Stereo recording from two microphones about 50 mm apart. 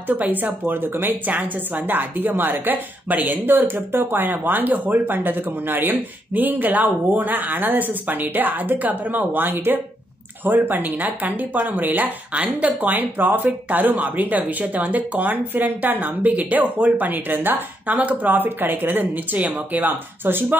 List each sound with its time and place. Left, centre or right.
0.1 s a woman's voice: right
1.3 s a woman's voice: right